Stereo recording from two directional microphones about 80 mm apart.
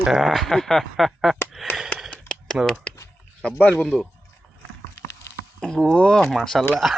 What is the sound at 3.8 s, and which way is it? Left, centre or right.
Speech, centre.